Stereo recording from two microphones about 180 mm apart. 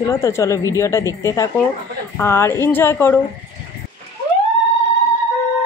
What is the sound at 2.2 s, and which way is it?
Speech, 15° left (ahead or behind).